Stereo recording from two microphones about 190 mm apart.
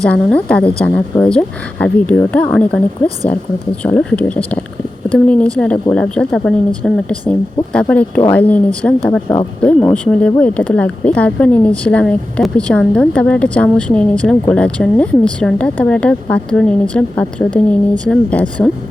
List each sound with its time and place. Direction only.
0.1 s speech: 5° left (ahead or behind)